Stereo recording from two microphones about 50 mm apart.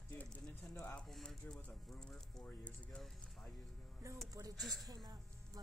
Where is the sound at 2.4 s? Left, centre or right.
Left.